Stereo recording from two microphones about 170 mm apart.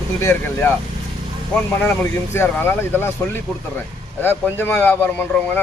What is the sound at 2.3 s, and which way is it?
Speech, 10° left (ahead or behind).